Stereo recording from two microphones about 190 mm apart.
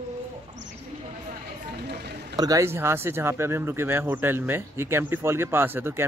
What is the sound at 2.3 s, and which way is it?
Speech, 20° right (ahead or behind).